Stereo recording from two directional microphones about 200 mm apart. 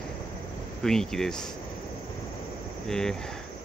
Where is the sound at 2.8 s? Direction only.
5° left (ahead or behind).